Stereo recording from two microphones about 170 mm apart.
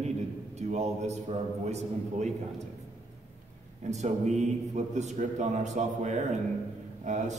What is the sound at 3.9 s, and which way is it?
A man's voice, 40° right (ahead or behind).